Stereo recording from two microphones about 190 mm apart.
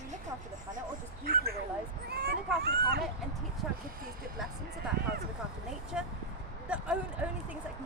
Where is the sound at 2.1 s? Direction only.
55° right (ahead or behind).